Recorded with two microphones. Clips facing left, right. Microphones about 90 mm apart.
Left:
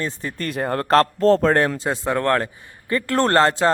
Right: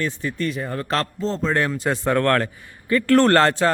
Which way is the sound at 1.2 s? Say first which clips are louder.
Left 9 dB; 70° left (ahead or behind).